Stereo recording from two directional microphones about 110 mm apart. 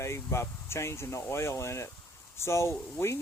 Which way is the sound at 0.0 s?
25° left (ahead or behind).